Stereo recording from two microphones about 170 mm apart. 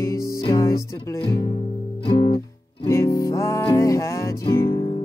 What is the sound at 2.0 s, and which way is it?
Music, 30° left (ahead or behind).